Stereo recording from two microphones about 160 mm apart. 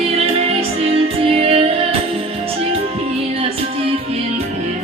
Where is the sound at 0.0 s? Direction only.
40° right (ahead or behind).